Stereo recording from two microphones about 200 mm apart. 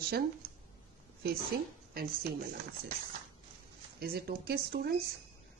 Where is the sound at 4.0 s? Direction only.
50° right (ahead or behind).